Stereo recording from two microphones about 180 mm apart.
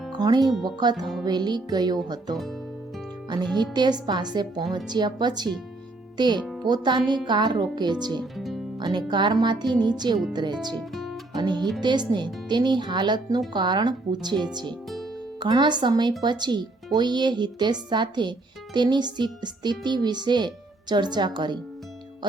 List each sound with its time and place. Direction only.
0.2 s speech: 20° right (ahead or behind)
3.6 s speech: 25° right (ahead or behind)
8.2 s music: centre (ahead or behind)
8.8 s speech: 25° right (ahead or behind)
10.8 s guitar: centre (ahead or behind)
11.3 s speech: 25° right (ahead or behind)